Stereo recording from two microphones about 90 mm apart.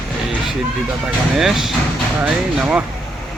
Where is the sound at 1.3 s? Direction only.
5° right (ahead or behind).